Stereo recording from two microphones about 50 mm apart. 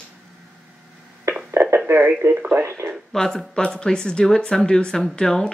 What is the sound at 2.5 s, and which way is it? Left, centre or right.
Speech, right.